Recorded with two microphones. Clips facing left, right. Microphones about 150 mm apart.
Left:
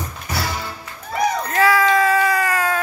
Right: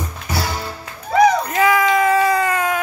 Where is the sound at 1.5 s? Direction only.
20° right (ahead or behind).